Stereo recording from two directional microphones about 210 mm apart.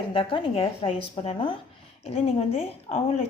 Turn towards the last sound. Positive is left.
turn(degrees=30)  # may be behind; listen again after turning